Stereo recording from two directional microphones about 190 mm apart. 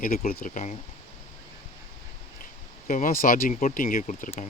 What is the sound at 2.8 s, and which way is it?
Speech, 45° left (ahead or behind).